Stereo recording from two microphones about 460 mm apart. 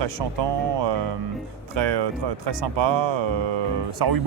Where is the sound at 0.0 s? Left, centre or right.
Right.